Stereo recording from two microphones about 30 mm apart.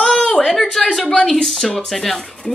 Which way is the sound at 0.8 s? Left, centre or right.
Centre.